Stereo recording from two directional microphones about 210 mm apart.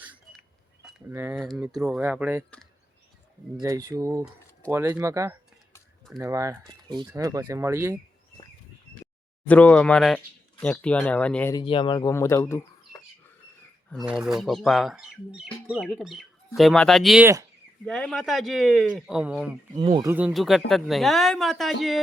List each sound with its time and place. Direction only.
0.0 s a sound: 10° right (ahead or behind)
1.1 s speech: 10° right (ahead or behind)
1.4 s speech: centre (ahead or behind)
3.6 s speech: 15° right (ahead or behind)
9.5 s speech: 5° left (ahead or behind)
11.5 s speech: 25° left (ahead or behind)
13.9 s speech: 5° right (ahead or behind)
19.7 s speech: 20° right (ahead or behind)
20.1 s speech: 5° right (ahead or behind)